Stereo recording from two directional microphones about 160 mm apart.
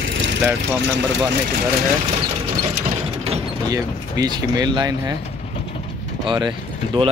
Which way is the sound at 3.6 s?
25° right (ahead or behind).